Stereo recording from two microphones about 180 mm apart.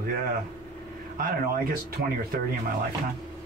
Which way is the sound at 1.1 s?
55° right (ahead or behind).